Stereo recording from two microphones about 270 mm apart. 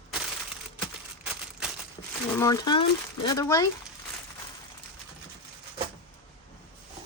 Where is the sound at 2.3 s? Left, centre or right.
Centre.